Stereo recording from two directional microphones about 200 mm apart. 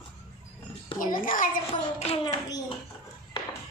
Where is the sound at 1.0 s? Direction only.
45° left (ahead or behind).